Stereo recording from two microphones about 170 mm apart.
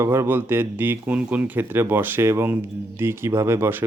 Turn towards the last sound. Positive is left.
turn(degrees=-15)  # may be behind; listen again after turning